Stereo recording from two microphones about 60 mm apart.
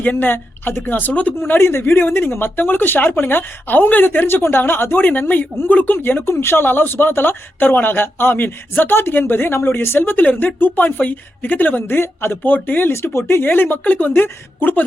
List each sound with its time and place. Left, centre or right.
0.0 s speech: left
1.4 s speech: left
12.9 s speech: left